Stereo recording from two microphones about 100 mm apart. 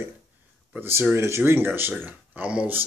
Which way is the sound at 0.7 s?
20° right (ahead or behind).